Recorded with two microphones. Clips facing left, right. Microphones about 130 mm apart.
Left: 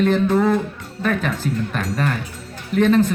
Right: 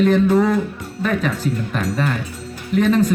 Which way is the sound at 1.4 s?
40° left (ahead or behind).